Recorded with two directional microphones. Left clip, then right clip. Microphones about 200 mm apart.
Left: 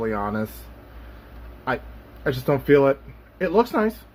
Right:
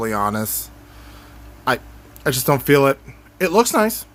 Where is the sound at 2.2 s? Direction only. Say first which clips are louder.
Right 3 dB; 35° right (ahead or behind).